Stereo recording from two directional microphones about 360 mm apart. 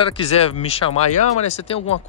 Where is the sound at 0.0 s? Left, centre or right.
Centre.